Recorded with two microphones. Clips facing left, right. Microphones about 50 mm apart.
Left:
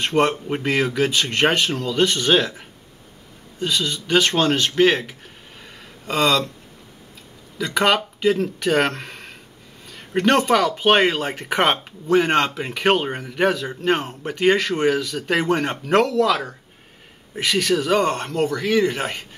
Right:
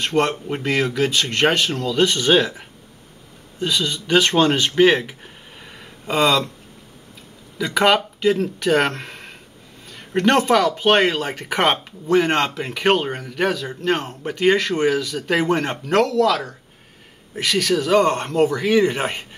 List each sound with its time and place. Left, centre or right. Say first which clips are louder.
0.0 s speech: left 1 dB; centre
7.5 s speech: right 2 dB; centre